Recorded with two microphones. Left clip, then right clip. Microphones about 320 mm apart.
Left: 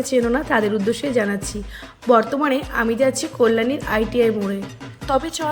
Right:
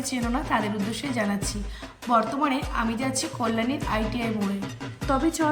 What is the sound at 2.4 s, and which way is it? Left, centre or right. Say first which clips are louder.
A woman's voice: left 6 dB; centre.